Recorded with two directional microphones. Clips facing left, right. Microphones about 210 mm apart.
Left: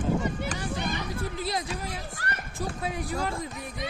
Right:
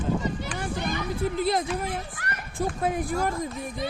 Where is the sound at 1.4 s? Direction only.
50° right (ahead or behind).